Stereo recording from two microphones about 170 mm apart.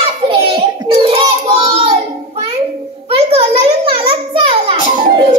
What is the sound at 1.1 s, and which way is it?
Child singing, 35° right (ahead or behind).